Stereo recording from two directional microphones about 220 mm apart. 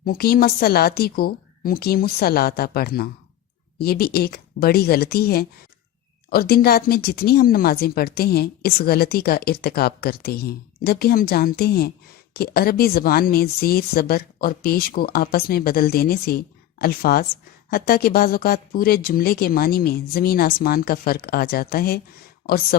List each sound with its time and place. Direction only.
0.0 s speech: 45° left (ahead or behind)